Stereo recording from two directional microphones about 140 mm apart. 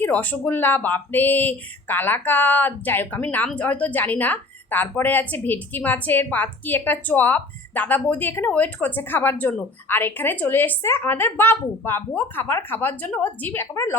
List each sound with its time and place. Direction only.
0.0 s speech: 10° left (ahead or behind)